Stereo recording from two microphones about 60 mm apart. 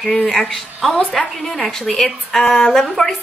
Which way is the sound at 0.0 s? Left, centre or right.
Centre.